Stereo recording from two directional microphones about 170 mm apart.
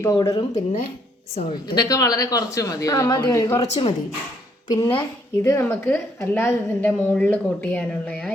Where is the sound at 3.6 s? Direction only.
35° left (ahead or behind).